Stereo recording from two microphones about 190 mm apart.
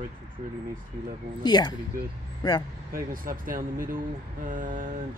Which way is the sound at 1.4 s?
20° left (ahead or behind).